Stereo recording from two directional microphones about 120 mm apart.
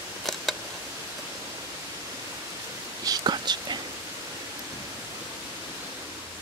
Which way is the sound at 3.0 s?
35° right (ahead or behind).